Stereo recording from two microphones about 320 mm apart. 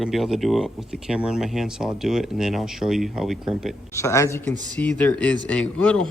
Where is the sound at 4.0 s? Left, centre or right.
Centre.